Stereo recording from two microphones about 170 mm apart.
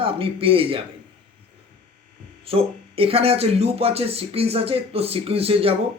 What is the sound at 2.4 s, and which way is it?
Speech, 35° right (ahead or behind).